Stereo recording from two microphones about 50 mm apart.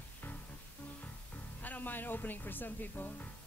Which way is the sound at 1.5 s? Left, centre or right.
Left.